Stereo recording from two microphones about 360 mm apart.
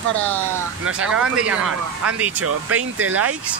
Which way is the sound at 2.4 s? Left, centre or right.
Right.